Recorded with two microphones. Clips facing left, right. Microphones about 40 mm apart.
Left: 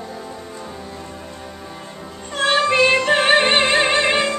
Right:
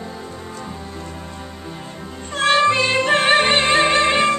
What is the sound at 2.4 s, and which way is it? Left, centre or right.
Music, centre.